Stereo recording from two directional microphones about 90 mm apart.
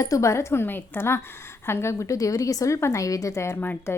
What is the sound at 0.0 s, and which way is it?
A woman's voice, 35° left (ahead or behind).